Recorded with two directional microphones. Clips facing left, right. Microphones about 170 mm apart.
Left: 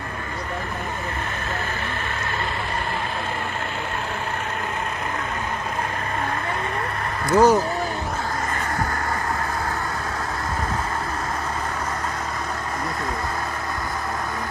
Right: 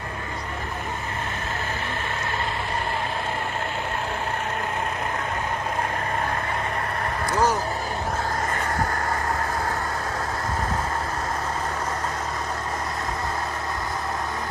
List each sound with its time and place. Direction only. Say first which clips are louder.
7.3 s speech: left 7 dB; 50° left (ahead or behind)